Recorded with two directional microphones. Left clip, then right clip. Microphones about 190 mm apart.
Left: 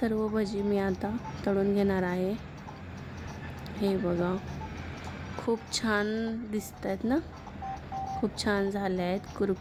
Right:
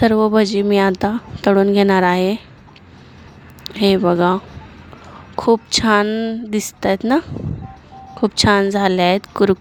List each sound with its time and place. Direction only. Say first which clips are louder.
0.0 s a woman's voice: right 16 dB; 50° right (ahead or behind)
3.6 s speech: right 15 dB; 50° right (ahead or behind)
5.4 s a woman's voice: right 16 dB; 50° right (ahead or behind)